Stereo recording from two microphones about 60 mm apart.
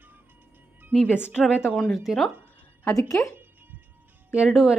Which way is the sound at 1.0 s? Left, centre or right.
Left.